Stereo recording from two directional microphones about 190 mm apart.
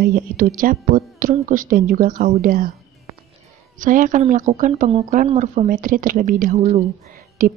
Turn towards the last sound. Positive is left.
turn(degrees=-50)  # may be behind; listen again after turning